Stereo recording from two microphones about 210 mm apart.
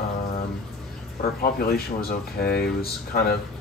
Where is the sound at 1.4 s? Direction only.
45° left (ahead or behind).